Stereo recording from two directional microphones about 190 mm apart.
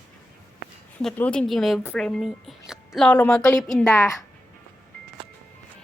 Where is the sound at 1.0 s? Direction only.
5° left (ahead or behind).